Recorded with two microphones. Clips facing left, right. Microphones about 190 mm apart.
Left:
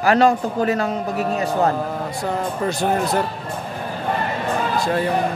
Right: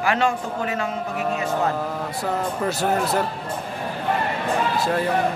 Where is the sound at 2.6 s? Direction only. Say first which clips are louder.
Left 2 dB; 5° right (ahead or behind).